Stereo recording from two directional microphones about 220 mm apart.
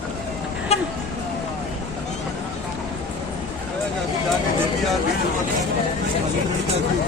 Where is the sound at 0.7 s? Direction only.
30° left (ahead or behind).